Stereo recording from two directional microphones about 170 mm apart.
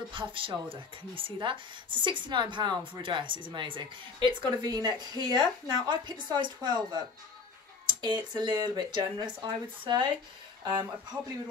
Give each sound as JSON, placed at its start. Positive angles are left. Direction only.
{"t": 0.1, "sound": "speech", "side_deg": -30}